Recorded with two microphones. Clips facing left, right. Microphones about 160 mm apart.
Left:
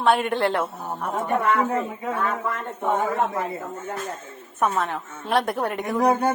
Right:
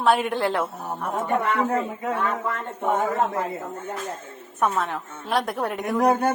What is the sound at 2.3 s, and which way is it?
A woman's voice, 5° right (ahead or behind).